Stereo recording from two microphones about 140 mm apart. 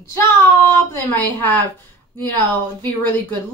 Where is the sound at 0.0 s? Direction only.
20° left (ahead or behind).